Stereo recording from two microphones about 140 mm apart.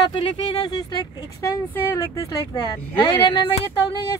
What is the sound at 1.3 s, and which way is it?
Speech, 20° left (ahead or behind).